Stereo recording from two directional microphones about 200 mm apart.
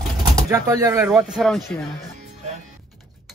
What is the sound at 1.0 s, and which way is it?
Speech, centre (ahead or behind).